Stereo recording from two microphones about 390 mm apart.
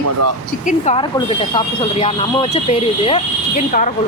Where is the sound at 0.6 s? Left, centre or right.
Centre.